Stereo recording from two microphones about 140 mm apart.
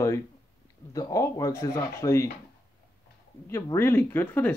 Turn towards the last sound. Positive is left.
turn(degrees=15)  # may be behind; listen again after turning